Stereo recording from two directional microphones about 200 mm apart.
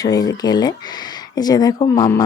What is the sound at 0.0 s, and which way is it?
Speech, 20° left (ahead or behind).